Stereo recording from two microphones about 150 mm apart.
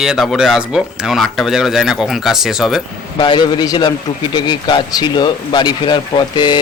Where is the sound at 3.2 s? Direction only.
30° left (ahead or behind).